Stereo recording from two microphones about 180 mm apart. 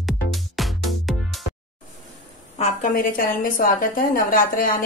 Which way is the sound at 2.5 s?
35° left (ahead or behind).